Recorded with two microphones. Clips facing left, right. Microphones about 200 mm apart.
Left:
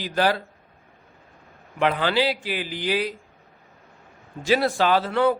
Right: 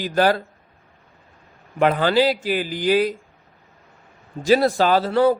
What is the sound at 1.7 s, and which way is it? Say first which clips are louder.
A man's voice: right 4 dB; 45° right (ahead or behind).